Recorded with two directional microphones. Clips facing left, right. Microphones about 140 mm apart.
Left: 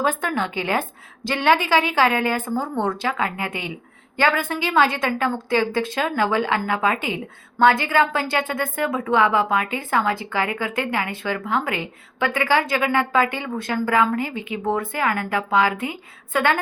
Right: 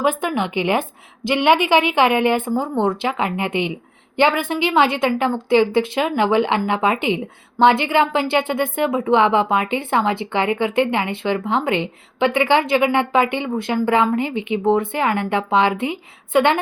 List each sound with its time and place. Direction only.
0.0 s a woman's voice: 15° right (ahead or behind)